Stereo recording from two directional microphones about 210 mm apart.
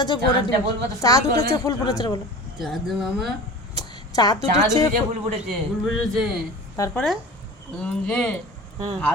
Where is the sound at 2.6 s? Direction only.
Centre (ahead or behind).